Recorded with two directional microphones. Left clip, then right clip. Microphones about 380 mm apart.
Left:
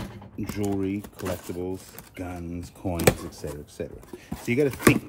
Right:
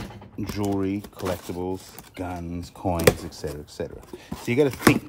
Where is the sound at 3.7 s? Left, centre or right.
Centre.